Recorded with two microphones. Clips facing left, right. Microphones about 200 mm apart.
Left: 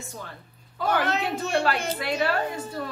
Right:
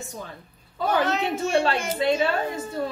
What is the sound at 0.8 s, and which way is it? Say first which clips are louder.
Speech: right 2 dB; 60° left (ahead or behind).